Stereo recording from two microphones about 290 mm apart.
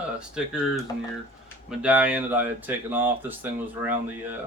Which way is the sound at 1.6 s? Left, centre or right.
Centre.